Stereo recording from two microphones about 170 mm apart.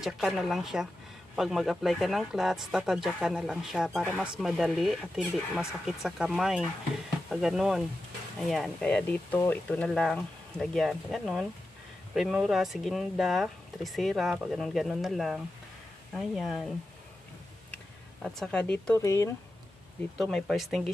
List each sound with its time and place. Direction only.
0.0 s speech: centre (ahead or behind)
18.2 s speech: 5° left (ahead or behind)
19.0 s speech: 20° left (ahead or behind)
20.2 s speech: centre (ahead or behind)